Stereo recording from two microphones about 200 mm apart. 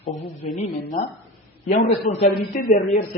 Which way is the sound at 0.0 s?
35° left (ahead or behind).